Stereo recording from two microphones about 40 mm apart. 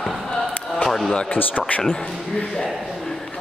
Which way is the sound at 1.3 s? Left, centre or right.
Left.